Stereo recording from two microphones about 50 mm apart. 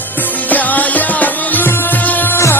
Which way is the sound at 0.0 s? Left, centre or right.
Left.